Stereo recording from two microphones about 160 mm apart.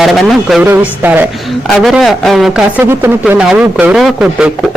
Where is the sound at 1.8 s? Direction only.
Centre (ahead or behind).